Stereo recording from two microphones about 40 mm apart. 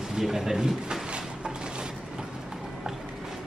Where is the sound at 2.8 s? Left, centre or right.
Centre.